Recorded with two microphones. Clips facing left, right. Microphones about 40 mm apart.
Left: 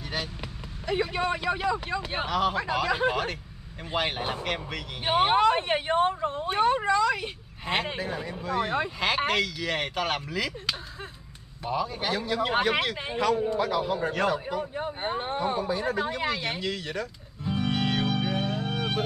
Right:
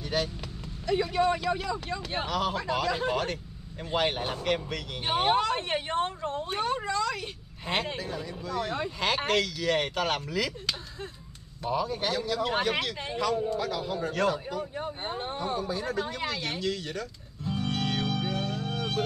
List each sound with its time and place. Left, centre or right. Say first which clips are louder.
0.1 s speech: right 4 dB; centre
0.8 s speech: right 1 dB; left
8.0 s speech: left 3 dB; left
9.0 s speech: even; centre
12.1 s a man's voice: left 5 dB; left